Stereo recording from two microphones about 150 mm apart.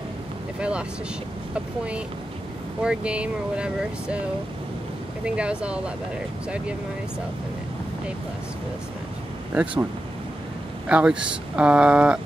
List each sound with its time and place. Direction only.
0.6 s speech: 5° right (ahead or behind)
2.8 s speech: 5° right (ahead or behind)
5.2 s speech: 5° right (ahead or behind)
9.5 s speech: 10° right (ahead or behind)
10.9 s speech: 5° right (ahead or behind)